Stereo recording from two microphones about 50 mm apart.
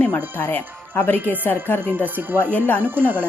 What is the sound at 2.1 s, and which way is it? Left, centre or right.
Speech, right.